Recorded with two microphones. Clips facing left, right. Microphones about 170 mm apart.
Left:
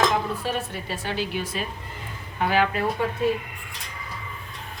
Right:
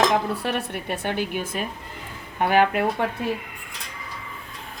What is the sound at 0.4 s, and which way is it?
A woman's voice, 65° right (ahead or behind).